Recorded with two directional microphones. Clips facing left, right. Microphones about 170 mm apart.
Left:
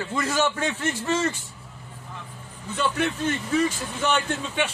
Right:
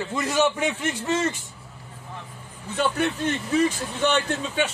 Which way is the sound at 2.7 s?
35° right (ahead or behind).